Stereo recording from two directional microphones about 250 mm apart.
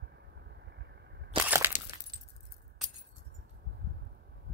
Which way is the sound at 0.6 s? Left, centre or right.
Right.